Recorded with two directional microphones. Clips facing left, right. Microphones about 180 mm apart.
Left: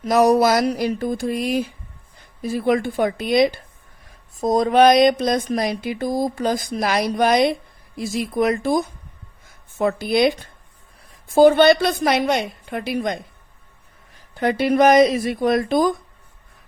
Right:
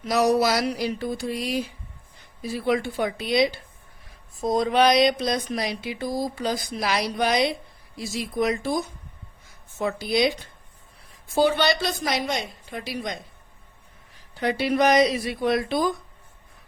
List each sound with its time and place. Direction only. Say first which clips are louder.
0.0 s a woman's voice: left 5 dB; 50° left (ahead or behind)
11.3 s a woman's voice: left 9 dB; 50° left (ahead or behind)
14.6 s speech: left 6 dB; 50° left (ahead or behind)